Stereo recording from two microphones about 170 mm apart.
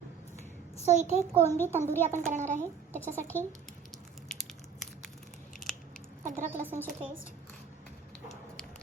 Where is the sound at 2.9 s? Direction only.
15° right (ahead or behind).